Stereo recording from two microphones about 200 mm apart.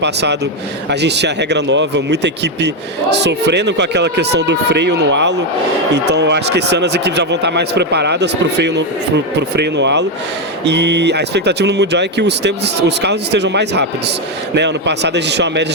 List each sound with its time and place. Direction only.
0.0 s speech: 60° right (ahead or behind)